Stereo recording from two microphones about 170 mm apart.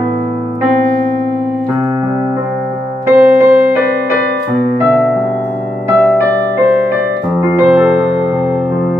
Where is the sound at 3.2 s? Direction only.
5° right (ahead or behind).